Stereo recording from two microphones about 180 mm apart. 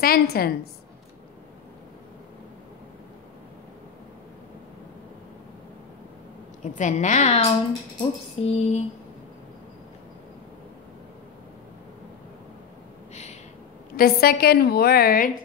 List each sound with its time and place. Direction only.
0.0 s a woman's voice: 60° left (ahead or behind)
6.6 s a woman's voice: 45° left (ahead or behind)
8.0 s music: 35° left (ahead or behind)
13.1 s a sound: 40° left (ahead or behind)
13.9 s a woman's voice: 60° left (ahead or behind)